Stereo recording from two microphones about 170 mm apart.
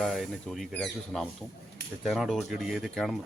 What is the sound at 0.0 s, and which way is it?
Speech, centre (ahead or behind).